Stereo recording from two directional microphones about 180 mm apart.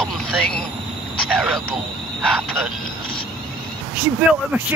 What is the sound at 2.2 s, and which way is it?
Speech, 10° right (ahead or behind).